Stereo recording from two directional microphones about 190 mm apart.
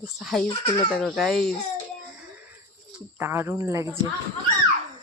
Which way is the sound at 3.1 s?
10° right (ahead or behind).